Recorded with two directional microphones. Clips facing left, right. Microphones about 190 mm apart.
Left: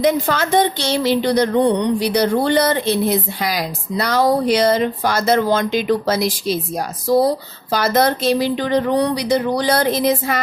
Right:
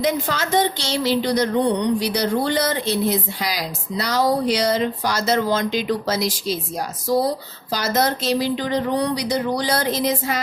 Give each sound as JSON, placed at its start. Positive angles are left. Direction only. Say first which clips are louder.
{"t": 0.0, "sound": "a woman's voice", "louder": "left 5 dB", "side_deg": 55}
{"t": 7.7, "sound": "a woman's voice", "louder": "left 5 dB", "side_deg": 60}